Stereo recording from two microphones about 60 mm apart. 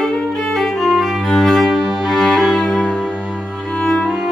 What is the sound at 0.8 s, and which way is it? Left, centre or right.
Cello, centre.